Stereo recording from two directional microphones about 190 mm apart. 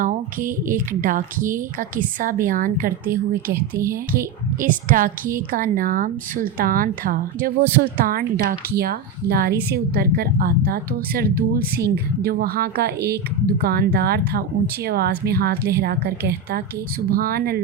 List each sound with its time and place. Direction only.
0.0 s a woman's voice: 45° right (ahead or behind)